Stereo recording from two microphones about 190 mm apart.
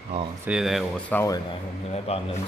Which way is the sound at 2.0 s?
30° left (ahead or behind).